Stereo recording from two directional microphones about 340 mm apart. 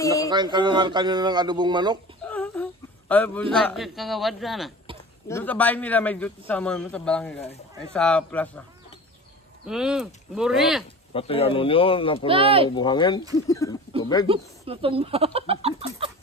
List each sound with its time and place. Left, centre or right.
0.3 s speech: centre
2.2 s whimper: centre
3.5 s a man's voice: centre
9.7 s a man's voice: centre
11.1 s speech: centre
12.3 s speech: centre
12.6 s speech: centre
14.2 s speech: centre